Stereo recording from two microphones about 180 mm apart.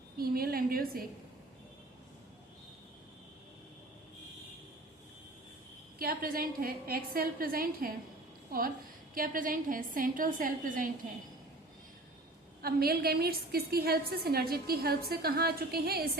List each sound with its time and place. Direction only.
0.2 s a woman's voice: 55° right (ahead or behind)
6.0 s a woman's voice: 55° right (ahead or behind)
9.1 s a woman's voice: 50° right (ahead or behind)
12.6 s a woman's voice: 60° right (ahead or behind)